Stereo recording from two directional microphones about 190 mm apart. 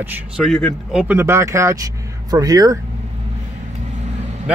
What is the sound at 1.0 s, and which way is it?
Speech, 10° right (ahead or behind).